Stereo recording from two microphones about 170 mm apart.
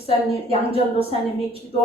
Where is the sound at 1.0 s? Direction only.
35° right (ahead or behind).